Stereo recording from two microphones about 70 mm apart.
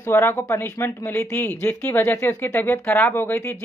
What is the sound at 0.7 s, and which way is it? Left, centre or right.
Speech, left.